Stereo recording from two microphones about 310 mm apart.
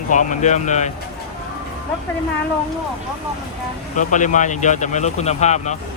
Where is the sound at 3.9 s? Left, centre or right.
Left.